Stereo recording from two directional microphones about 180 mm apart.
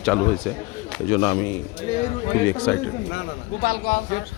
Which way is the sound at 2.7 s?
10° left (ahead or behind).